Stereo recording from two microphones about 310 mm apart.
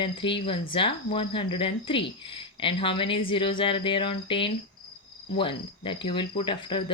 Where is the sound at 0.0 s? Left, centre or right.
Centre.